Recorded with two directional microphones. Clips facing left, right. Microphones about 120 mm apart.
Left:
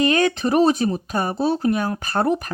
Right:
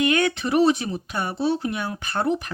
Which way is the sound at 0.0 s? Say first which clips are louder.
Left 3 dB; 35° left (ahead or behind).